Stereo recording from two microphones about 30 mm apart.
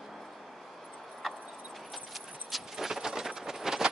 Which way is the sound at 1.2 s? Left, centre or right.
Centre.